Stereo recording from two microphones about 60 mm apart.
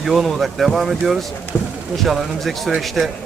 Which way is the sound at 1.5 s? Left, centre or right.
Left.